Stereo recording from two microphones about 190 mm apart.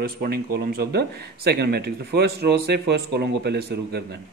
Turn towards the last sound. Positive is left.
turn(degrees=-55)  # may be behind; listen again after turning